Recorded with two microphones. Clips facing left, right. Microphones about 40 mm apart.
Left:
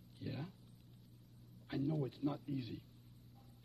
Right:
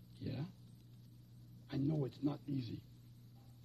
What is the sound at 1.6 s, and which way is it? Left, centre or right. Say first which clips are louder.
A man's voice: right 1 dB; centre.